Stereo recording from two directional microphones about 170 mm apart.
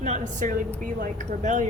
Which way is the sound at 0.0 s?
45° right (ahead or behind).